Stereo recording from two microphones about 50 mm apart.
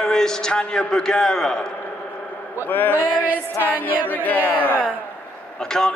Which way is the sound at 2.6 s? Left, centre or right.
Left.